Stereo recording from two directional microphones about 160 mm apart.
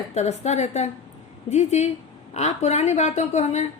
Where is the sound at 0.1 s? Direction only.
45° left (ahead or behind).